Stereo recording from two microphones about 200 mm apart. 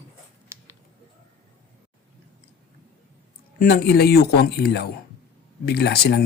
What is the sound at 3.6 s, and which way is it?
Speech, 50° left (ahead or behind).